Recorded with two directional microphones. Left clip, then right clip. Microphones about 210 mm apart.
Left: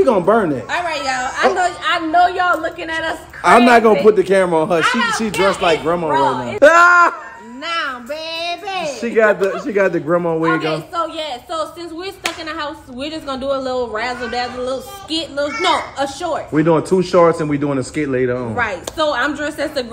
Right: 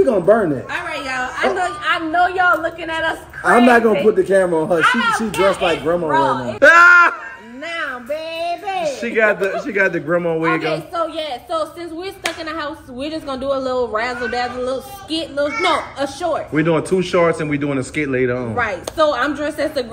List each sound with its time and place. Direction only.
0.0 s a woman's voice: 5° left (ahead or behind)
1.6 s a sound: 50° left (ahead or behind)
3.4 s a woman's voice: 5° left (ahead or behind)
4.8 s speech: 45° left (ahead or behind)
5.4 s a woman's voice: 5° left (ahead or behind)
7.7 s a sound: 5° left (ahead or behind)
9.0 s a woman's voice: centre (ahead or behind)